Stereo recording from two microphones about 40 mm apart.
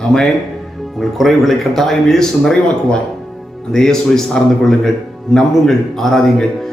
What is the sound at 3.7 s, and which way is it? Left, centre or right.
Speech, centre.